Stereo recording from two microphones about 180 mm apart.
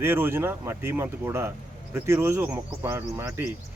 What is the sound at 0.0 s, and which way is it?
Speech, 10° right (ahead or behind).